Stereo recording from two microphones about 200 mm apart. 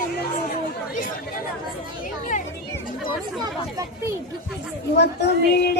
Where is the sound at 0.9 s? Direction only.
45° left (ahead or behind).